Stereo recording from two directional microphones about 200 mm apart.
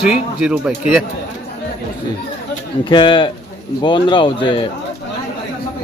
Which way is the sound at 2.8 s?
20° left (ahead or behind).